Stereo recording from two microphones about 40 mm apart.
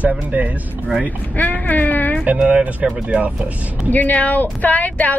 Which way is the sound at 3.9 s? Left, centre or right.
Left.